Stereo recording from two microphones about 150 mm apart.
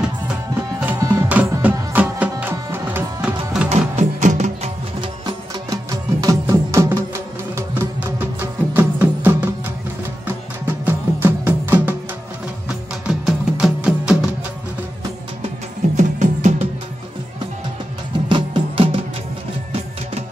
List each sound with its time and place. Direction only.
0.8 s music: 15° right (ahead or behind)
3.7 s music: 50° right (ahead or behind)
5.0 s music: 25° right (ahead or behind)
10.9 s music: 15° right (ahead or behind)
16.0 s music: 55° right (ahead or behind)
18.3 s music: 35° right (ahead or behind)